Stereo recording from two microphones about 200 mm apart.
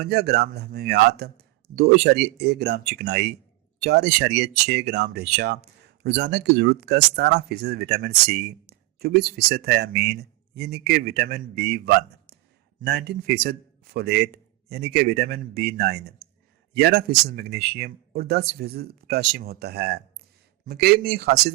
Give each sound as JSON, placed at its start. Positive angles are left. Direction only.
{"t": 0.0, "sound": "speech", "side_deg": -55}